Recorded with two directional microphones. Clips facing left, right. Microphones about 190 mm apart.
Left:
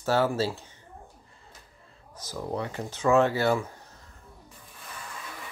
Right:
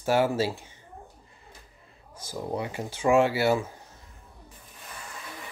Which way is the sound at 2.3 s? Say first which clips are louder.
Right 1 dB; 10° right (ahead or behind).